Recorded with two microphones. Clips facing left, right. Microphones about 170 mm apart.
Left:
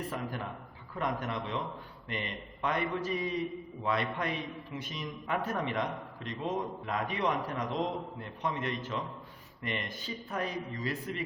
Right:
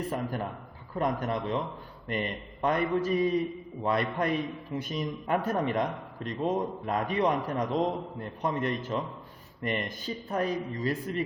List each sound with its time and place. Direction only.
0.1 s a man's voice: 45° right (ahead or behind)